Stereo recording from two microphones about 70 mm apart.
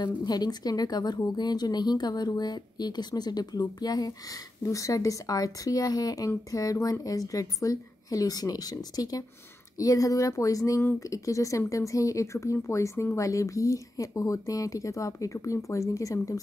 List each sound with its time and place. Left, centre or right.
0.0 s speech: left